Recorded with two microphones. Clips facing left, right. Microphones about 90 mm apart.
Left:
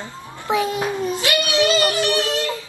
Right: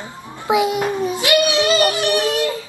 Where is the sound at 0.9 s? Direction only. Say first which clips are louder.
Right 4 dB; 15° right (ahead or behind).